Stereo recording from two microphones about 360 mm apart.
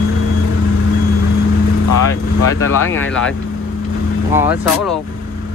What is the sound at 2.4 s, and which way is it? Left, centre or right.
Speech, left.